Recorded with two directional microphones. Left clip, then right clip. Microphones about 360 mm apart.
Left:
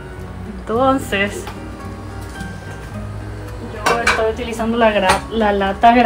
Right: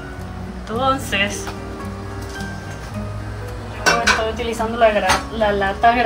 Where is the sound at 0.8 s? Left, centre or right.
Centre.